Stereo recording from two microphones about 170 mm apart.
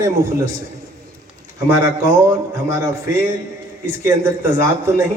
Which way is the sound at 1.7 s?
15° right (ahead or behind).